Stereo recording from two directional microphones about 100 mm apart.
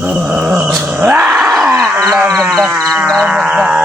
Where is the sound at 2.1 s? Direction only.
Centre (ahead or behind).